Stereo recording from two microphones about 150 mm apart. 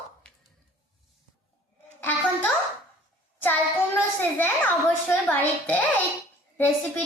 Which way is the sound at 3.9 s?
10° left (ahead or behind).